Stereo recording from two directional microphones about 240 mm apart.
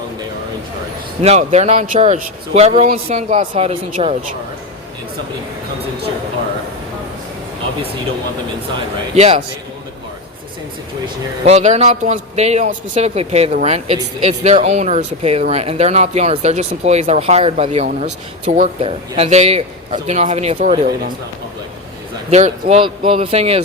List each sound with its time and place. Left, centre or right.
1.2 s a man's voice: right
9.1 s a man's voice: right
11.0 s a man's voice: right
22.3 s a man's voice: right